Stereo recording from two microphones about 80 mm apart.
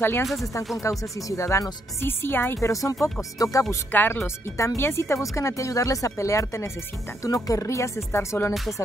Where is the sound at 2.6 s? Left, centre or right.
Left.